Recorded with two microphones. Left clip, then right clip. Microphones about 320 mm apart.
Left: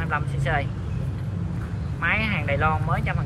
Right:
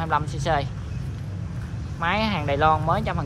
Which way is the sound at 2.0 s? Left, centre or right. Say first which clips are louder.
Even; centre.